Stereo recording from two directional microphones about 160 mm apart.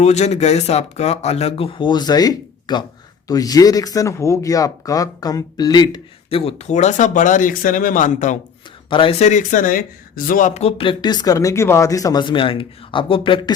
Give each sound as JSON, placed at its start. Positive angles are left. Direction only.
{"t": 0.0, "sound": "speech", "side_deg": 45}
{"t": 8.9, "sound": "speech", "side_deg": 35}